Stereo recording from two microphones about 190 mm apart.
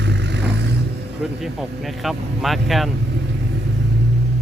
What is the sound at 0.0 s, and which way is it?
Vehicle, 65° right (ahead or behind).